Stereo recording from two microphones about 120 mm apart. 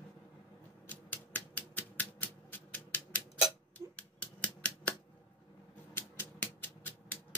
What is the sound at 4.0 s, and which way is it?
Finger snapping, 10° left (ahead or behind).